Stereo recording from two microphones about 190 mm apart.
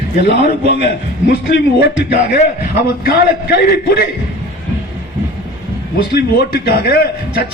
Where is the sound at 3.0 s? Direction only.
55° left (ahead or behind).